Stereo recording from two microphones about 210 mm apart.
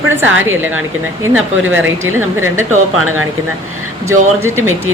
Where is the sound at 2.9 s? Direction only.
90° right.